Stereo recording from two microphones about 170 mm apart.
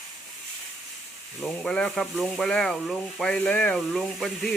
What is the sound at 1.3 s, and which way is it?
Speech, 5° left (ahead or behind).